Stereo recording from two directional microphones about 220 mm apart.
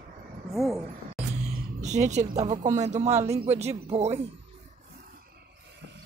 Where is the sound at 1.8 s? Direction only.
30° right (ahead or behind).